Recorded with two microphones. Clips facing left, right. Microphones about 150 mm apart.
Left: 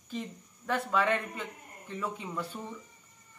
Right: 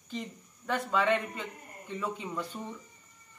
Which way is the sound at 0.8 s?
Centre (ahead or behind).